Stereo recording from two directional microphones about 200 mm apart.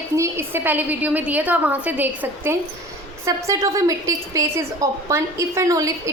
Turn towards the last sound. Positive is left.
turn(degrees=-15)  # may be behind; listen again after turning